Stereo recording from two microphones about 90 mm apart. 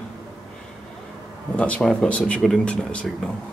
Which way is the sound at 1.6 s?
15° left (ahead or behind).